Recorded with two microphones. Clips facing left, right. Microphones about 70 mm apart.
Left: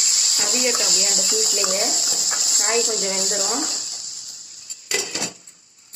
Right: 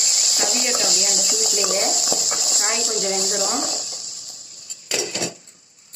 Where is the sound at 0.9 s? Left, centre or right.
Left.